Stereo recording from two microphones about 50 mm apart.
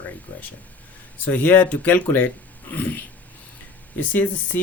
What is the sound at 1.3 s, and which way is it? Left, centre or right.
Speech, left.